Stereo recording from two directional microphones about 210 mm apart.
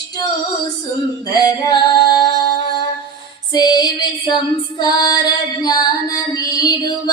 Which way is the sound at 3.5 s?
20° left (ahead or behind).